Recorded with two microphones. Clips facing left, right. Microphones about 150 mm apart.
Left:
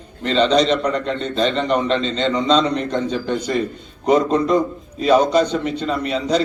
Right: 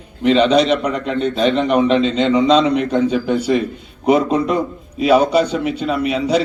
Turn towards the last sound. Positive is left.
turn(degrees=-10)  # may be behind; listen again after turning